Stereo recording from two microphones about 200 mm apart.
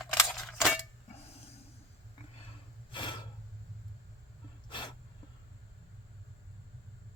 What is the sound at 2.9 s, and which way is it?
Snort, 25° left (ahead or behind).